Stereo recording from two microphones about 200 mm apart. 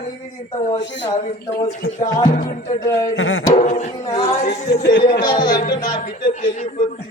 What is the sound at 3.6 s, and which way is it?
A man's voice, 40° left (ahead or behind).